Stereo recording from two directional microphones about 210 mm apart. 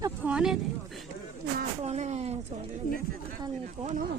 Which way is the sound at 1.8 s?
30° right (ahead or behind).